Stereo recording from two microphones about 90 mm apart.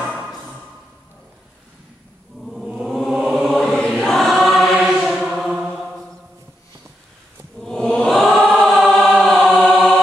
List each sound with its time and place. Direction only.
2.4 s chant: 5° right (ahead or behind)
3.4 s choir: 5° left (ahead or behind)
7.6 s chant: 5° left (ahead or behind)
8.4 s choir: 15° left (ahead or behind)
8.6 s choir: 5° left (ahead or behind)